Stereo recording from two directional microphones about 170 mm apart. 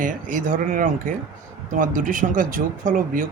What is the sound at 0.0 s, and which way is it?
Speech, 50° right (ahead or behind).